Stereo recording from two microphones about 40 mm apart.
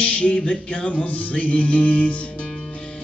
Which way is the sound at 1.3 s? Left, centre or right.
Left.